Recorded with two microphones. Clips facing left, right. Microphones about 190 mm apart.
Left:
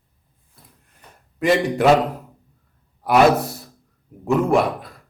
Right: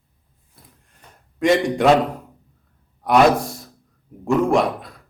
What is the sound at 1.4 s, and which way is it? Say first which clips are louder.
Speech: right 1 dB; centre (ahead or behind).